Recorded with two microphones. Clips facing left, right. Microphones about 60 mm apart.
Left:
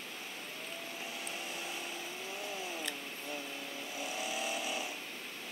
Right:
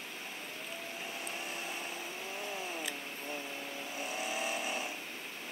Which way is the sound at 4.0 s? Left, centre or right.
Right.